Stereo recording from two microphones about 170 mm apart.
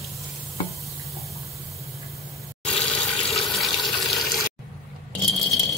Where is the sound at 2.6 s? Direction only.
5° left (ahead or behind).